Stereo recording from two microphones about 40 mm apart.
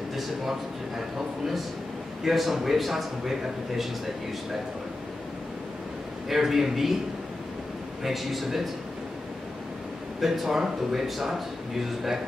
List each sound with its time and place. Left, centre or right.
0.1 s a man's voice: centre
6.2 s a man's voice: centre
8.0 s a man's voice: centre
10.2 s a man's voice: centre